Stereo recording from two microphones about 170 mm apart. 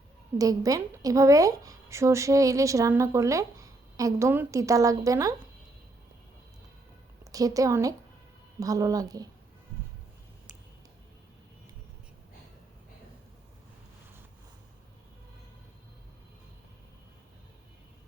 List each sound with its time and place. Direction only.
0.3 s a woman's voice: 20° right (ahead or behind)
7.3 s a woman's voice: 20° right (ahead or behind)